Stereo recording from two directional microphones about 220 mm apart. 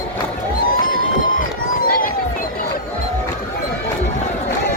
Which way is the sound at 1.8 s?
40° left (ahead or behind).